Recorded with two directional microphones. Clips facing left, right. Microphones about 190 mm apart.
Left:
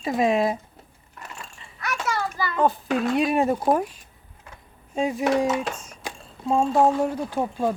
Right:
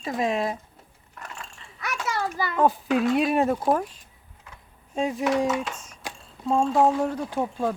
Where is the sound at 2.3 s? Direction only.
20° right (ahead or behind).